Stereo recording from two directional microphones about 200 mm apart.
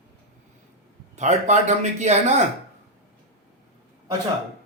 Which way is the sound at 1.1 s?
35° right (ahead or behind).